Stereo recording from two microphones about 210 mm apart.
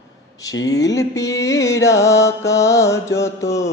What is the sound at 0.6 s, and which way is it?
Mantra, 15° left (ahead or behind).